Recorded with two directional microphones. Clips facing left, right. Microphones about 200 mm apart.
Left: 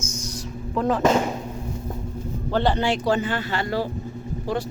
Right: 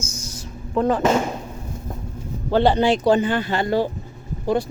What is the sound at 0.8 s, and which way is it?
Speech, centre (ahead or behind).